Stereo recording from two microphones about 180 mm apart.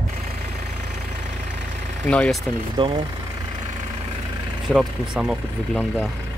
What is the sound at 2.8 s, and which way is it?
Speech, 25° right (ahead or behind).